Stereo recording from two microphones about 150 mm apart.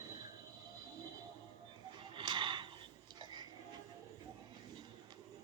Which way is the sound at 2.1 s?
30° right (ahead or behind).